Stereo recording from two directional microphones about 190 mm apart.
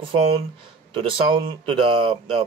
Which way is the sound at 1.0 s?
25° right (ahead or behind).